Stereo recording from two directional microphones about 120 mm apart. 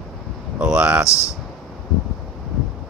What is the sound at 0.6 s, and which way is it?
Speech, 10° right (ahead or behind).